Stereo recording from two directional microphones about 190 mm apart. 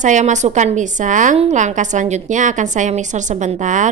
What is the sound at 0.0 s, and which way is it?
A woman's voice, 40° right (ahead or behind).